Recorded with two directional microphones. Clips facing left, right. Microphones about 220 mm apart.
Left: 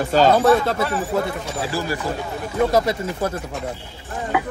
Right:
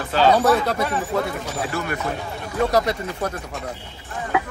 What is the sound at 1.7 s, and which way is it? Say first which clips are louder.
Speech: left 4 dB; 30° left (ahead or behind).